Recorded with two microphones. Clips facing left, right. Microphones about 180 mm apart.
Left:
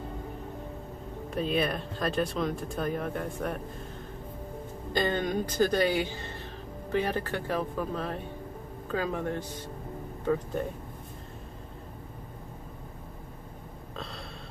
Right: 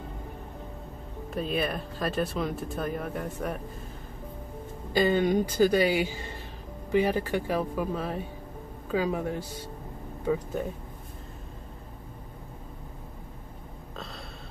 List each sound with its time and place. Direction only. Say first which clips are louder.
1.3 s speech: left 1 dB; centre (ahead or behind)
4.9 s speech: right 5 dB; 10° right (ahead or behind)